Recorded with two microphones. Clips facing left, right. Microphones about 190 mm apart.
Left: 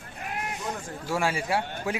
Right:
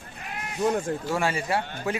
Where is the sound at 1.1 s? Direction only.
10° left (ahead or behind).